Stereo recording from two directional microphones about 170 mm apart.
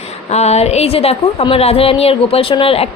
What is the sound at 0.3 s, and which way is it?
A woman's voice, 40° left (ahead or behind).